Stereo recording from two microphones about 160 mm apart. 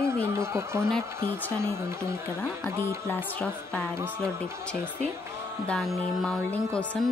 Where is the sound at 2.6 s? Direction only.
10° left (ahead or behind).